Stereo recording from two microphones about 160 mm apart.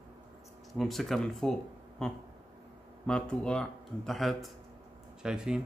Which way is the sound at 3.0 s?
5° left (ahead or behind).